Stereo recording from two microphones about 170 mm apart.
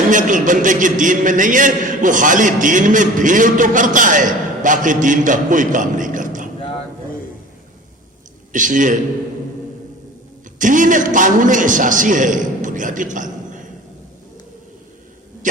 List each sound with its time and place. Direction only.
0.1 s a man's voice: 50° right (ahead or behind)
8.5 s a man's voice: 50° right (ahead or behind)
10.6 s a man's voice: 50° right (ahead or behind)